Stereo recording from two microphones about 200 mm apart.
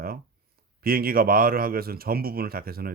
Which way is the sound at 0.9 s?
45° right (ahead or behind).